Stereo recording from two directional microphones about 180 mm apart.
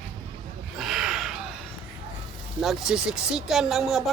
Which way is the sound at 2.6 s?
Centre (ahead or behind).